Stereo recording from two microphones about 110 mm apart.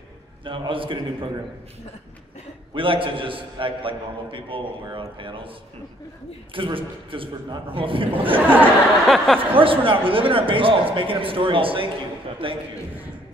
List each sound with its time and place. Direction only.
0.5 s a man's voice: 50° right (ahead or behind)
2.7 s a man's voice: 50° right (ahead or behind)
6.5 s a man's voice: 50° right (ahead or behind)
9.0 s speech: centre (ahead or behind)
9.4 s a man's voice: 55° right (ahead or behind)